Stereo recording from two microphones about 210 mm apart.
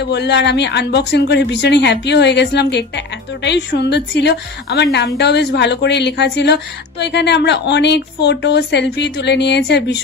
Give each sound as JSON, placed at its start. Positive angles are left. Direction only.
{"t": 0.0, "sound": "a woman's voice", "side_deg": 55}